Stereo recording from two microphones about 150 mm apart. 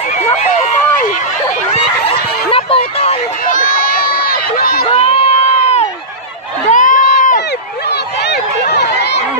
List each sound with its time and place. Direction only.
0.4 s run: 45° left (ahead or behind)
1.7 s a sound: 40° left (ahead or behind)
3.4 s run: 60° left (ahead or behind); by 4.8 s 85° left
4.8 s crowd: 40° left (ahead or behind)
6.7 s run: 60° left (ahead or behind)
8.3 s a sound: 90° left